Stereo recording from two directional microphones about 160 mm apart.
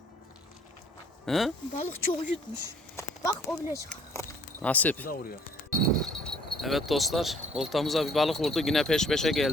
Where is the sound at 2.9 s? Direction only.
20° left (ahead or behind).